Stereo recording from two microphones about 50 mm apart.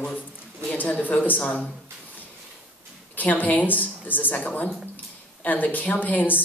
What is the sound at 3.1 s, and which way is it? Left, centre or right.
Speech, left.